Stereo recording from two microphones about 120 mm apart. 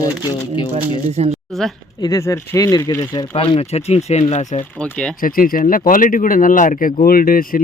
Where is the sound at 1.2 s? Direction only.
65° right (ahead or behind).